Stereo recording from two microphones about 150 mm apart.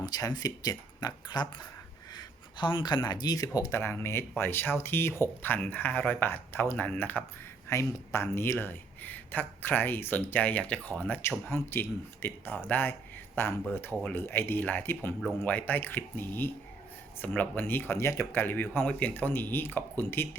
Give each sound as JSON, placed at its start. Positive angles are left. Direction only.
{"t": 0.0, "sound": "speech", "side_deg": 25}